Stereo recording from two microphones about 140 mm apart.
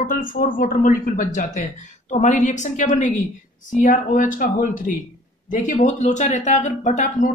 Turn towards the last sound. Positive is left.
turn(degrees=65)  # may be behind; listen again after turning